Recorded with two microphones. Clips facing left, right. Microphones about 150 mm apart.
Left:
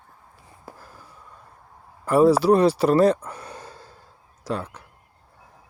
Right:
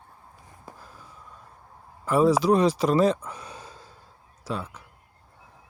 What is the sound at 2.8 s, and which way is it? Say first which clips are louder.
Speech: left 5 dB; 65° left (ahead or behind).